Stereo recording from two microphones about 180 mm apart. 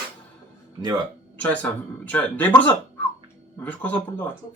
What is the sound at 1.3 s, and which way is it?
Speech, 10° left (ahead or behind).